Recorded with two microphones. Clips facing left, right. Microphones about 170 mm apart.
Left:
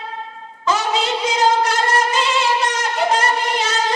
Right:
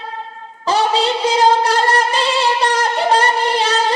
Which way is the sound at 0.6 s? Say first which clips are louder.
Right 4 dB; 35° right (ahead or behind).